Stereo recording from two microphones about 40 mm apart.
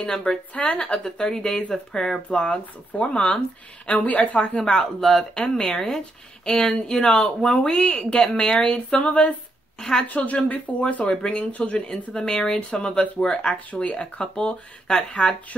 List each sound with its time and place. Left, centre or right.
0.3 s speech: left
4.4 s speech: left
5.0 s speech: centre; by 9.3 s left
9.8 s speech: centre
10.0 s speech: left
11.1 s speech: left
11.9 s speech: centre